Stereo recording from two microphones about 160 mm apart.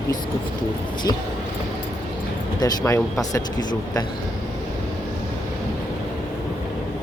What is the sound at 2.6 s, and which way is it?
Speech, 20° left (ahead or behind).